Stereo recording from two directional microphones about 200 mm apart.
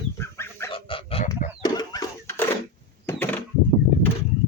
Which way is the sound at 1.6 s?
20° left (ahead or behind).